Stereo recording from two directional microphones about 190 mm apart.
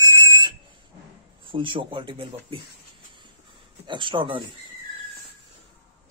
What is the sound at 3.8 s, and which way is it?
Speech, 25° right (ahead or behind).